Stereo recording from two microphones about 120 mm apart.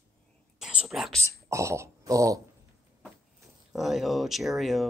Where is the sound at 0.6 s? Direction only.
5° right (ahead or behind).